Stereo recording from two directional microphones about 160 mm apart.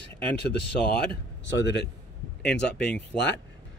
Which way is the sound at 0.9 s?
90° left.